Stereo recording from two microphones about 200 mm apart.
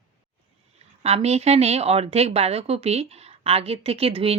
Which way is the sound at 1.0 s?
30° right (ahead or behind).